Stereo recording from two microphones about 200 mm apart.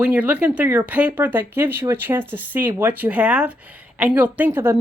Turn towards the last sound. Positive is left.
turn(degrees=-10)  # may be behind; listen again after turning